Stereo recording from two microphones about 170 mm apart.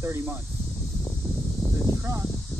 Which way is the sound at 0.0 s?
15° right (ahead or behind).